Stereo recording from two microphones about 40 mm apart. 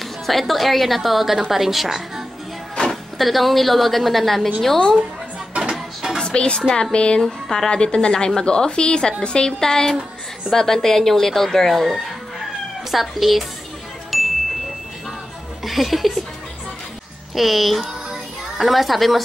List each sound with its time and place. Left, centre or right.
0.3 s a woman's voice: centre
2.7 s music: centre
3.2 s a woman's voice: centre
5.6 s music: centre
6.2 s a woman's voice: left
7.2 s a woman's voice: centre
7.7 s a woman's voice: left; by 13.5 s centre
14.1 s music: centre
15.6 s a woman's voice: centre
17.4 s a woman's voice: centre